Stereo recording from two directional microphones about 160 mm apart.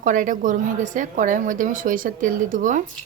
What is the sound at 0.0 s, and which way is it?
A woman's voice, 55° right (ahead or behind).